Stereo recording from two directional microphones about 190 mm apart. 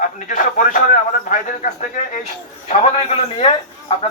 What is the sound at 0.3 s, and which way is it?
A man's voice, 45° left (ahead or behind).